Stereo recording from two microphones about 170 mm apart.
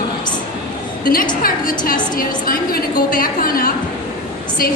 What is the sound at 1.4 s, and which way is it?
A woman's voice, 60° left (ahead or behind).